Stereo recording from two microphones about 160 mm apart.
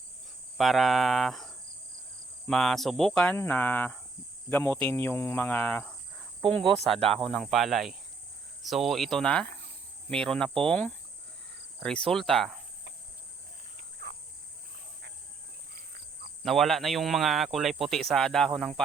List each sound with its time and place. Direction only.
0.5 s speech: centre (ahead or behind)
3.3 s cricket: 10° left (ahead or behind)
6.5 s speech: 5° left (ahead or behind)
10.7 s cricket: 10° left (ahead or behind)
11.8 s speech: 5° left (ahead or behind)
14.0 s cricket: 90° right
16.4 s speech: centre (ahead or behind)